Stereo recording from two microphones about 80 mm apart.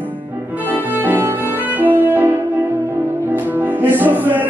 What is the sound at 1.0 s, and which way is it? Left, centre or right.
Music, right.